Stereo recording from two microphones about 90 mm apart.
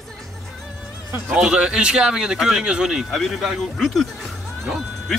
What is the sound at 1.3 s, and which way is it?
Speech, 10° right (ahead or behind).